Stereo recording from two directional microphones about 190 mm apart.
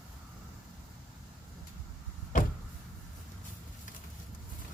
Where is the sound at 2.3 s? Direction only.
40° left (ahead or behind).